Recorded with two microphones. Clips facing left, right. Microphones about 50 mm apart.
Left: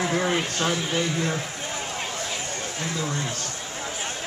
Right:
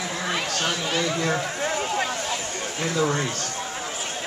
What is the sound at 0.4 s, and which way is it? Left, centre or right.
Speech, right.